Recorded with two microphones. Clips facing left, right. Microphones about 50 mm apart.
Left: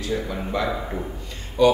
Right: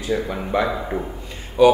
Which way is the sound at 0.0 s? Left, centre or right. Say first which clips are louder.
Right 3 dB; centre.